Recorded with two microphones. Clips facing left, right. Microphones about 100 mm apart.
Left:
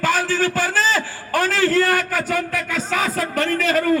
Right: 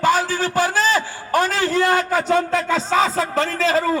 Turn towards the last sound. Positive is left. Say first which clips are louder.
# right 1 dB
turn(degrees=-25)  # may be behind; listen again after turning